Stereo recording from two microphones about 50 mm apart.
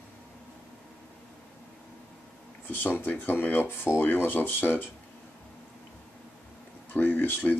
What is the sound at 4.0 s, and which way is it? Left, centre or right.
Speech, left.